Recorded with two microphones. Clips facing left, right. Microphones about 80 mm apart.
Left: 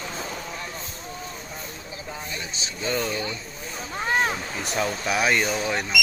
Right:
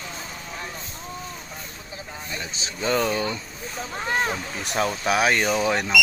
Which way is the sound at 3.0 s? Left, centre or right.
Right.